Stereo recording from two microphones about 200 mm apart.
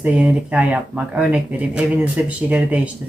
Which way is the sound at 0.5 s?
5° right (ahead or behind).